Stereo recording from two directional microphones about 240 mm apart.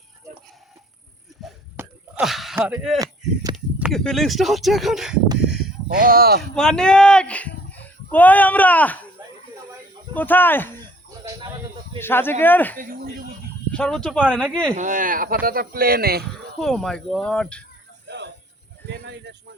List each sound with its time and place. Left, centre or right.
1.7 s a sound: centre
3.5 s speech: centre
6.0 s speech: right
6.6 s speech: centre
10.2 s speech: centre
11.9 s speech: centre
12.8 s snake: right
13.7 s speech: centre
14.4 s speech: centre
14.8 s speech: right
16.6 s speech: centre
18.1 s a sound: right